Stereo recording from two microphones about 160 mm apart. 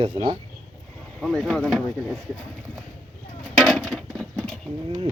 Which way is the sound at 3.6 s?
Centre (ahead or behind).